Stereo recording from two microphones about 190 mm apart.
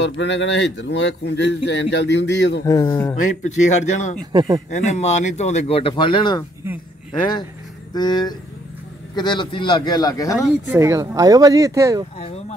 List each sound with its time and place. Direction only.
0.0 s a man's voice: 70° left (ahead or behind)
2.6 s speech: 20° left (ahead or behind)
3.2 s speech: 40° left (ahead or behind)
4.3 s a man's voice: 25° right (ahead or behind)
4.6 s speech: 40° left (ahead or behind)
7.9 s speech: 20° left (ahead or behind)
10.8 s speech: 15° right (ahead or behind)
12.2 s a sound: 35° left (ahead or behind)